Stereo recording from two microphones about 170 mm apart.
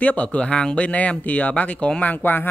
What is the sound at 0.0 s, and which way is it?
Speech, 10° left (ahead or behind).